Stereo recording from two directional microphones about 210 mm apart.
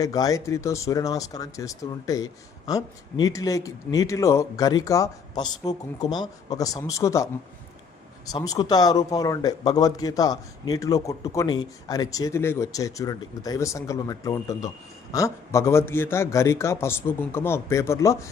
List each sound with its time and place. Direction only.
0.0 s speech: 15° left (ahead or behind)
8.3 s speech: 20° left (ahead or behind)